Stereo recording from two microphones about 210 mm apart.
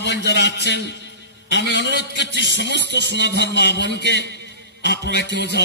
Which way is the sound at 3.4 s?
55° left (ahead or behind).